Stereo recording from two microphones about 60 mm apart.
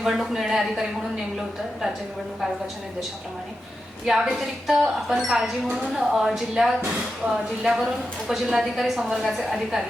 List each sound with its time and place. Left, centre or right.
0.0 s a woman's voice: centre
4.0 s a woman's voice: centre